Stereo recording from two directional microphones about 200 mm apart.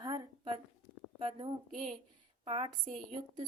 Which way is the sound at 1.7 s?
40° right (ahead or behind).